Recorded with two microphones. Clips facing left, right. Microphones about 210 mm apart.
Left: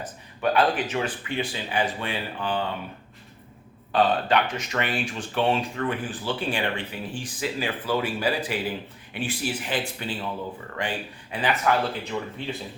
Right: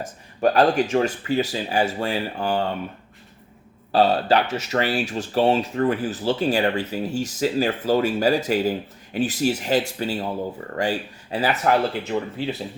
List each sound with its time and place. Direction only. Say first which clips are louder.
0.0 s speech: right 6 dB; 40° right (ahead or behind)
3.9 s speech: right 4 dB; 35° right (ahead or behind)